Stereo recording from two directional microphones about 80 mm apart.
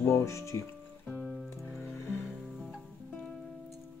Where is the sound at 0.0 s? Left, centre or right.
Left.